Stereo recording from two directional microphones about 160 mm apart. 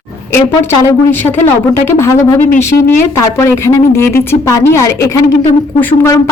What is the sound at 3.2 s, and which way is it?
Speech, 15° left (ahead or behind).